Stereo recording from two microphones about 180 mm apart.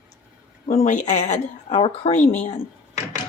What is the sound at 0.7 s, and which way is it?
Speech, 40° left (ahead or behind).